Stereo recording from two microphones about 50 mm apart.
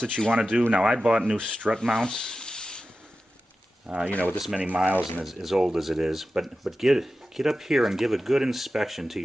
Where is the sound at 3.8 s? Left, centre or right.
Right.